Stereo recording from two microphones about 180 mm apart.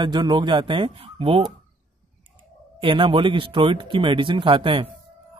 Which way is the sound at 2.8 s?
30° right (ahead or behind).